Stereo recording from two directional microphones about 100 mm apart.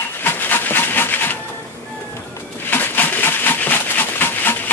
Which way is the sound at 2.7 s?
20° left (ahead or behind).